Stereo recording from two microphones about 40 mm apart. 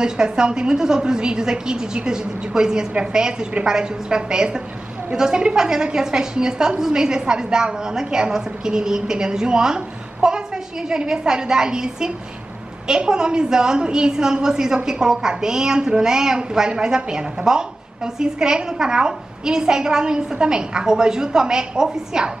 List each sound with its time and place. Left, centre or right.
0.0 s a woman's voice: centre